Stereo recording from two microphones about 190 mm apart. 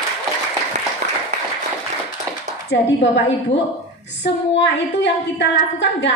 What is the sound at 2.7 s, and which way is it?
A woman's voice, 70° left (ahead or behind).